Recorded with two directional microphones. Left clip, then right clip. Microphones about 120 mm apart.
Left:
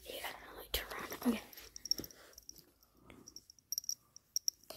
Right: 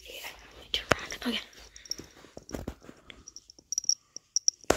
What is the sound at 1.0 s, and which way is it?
Whispering, 10° left (ahead or behind).